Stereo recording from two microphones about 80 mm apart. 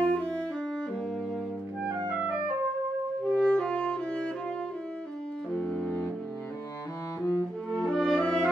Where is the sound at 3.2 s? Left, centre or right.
Centre.